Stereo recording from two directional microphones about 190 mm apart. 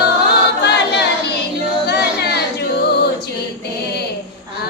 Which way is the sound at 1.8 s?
60° left (ahead or behind).